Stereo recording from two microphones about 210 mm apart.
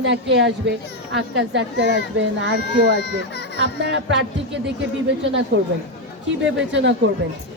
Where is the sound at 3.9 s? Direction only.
60° right (ahead or behind).